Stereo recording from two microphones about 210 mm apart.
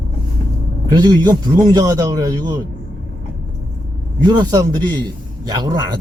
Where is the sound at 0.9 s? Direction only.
20° right (ahead or behind).